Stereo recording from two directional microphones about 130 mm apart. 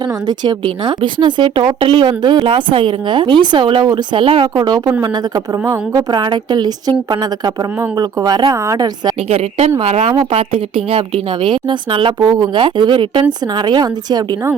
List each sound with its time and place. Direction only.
0.0 s a woman's voice: 35° right (ahead or behind)
4.4 s a woman's voice: 35° right (ahead or behind)
6.1 s a woman's voice: 35° right (ahead or behind)
9.3 s a woman's voice: 50° right (ahead or behind); by 14.3 s 30° right (ahead or behind)